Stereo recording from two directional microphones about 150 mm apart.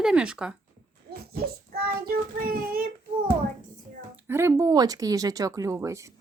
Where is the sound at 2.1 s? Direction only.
80° right.